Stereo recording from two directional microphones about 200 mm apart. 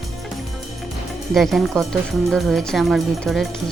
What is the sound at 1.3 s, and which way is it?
Speech, centre (ahead or behind).